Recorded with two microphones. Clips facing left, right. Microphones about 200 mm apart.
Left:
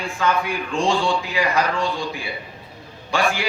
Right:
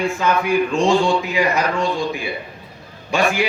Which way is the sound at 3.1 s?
20° right (ahead or behind).